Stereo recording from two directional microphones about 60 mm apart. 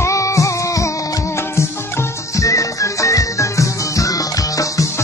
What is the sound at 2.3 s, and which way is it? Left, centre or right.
Music, left.